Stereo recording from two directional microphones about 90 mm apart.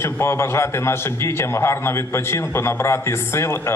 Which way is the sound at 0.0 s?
30° left (ahead or behind).